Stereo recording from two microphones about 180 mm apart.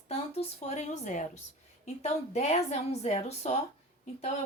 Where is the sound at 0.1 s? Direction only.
35° left (ahead or behind).